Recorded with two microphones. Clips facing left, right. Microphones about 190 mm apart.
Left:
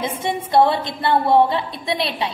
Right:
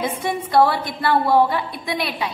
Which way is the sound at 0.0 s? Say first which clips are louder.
Even; 25° left (ahead or behind).